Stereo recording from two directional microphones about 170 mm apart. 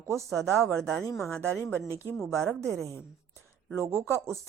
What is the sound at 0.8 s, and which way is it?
Speech, 5° left (ahead or behind).